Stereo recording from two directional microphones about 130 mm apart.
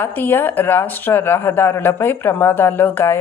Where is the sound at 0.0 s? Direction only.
15° left (ahead or behind).